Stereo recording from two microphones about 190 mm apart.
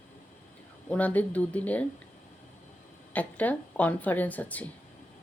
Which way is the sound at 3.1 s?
10° left (ahead or behind).